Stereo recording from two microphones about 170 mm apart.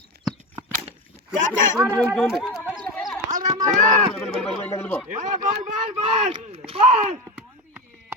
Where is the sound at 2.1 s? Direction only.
Centre (ahead or behind).